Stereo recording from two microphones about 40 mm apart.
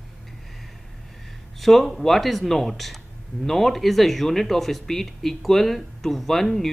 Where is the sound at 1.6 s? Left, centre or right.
Centre.